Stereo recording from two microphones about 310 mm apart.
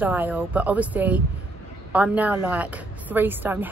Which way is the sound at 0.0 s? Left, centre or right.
Centre.